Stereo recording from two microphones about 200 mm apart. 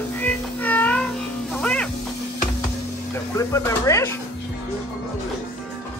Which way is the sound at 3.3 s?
15° left (ahead or behind).